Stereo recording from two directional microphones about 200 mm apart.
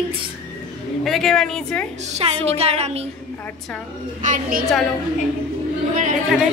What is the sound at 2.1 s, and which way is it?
Speech, 30° right (ahead or behind).